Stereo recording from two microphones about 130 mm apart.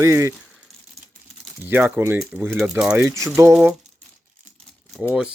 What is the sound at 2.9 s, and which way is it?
Speech, 20° right (ahead or behind).